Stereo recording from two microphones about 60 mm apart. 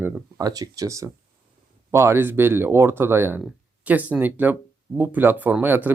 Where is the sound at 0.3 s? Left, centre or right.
Right.